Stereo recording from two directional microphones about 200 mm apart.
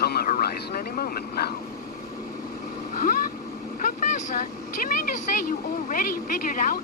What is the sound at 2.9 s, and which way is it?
Vehicle, 45° left (ahead or behind).